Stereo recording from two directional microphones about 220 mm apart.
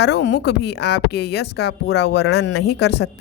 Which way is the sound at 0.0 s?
50° left (ahead or behind).